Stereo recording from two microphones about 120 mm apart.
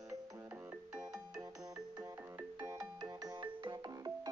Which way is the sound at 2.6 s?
30° right (ahead or behind).